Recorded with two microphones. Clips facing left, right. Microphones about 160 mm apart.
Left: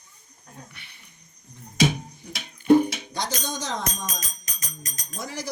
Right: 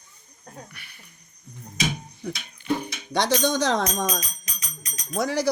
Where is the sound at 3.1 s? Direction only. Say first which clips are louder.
Right 8 dB; 70° right (ahead or behind).